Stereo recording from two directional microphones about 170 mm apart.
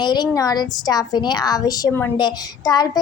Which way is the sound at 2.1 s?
25° left (ahead or behind).